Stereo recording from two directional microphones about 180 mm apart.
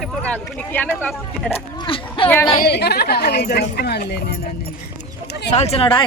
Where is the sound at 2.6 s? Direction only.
65° left (ahead or behind).